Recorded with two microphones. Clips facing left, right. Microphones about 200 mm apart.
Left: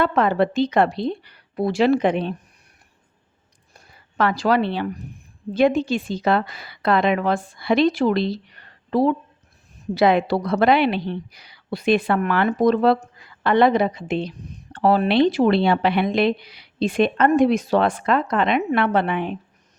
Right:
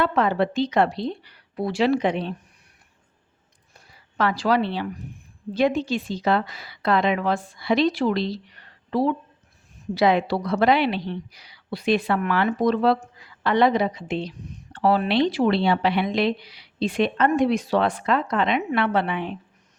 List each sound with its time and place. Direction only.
0.0 s a woman's voice: 50° left (ahead or behind)
3.9 s a woman's voice: 55° left (ahead or behind)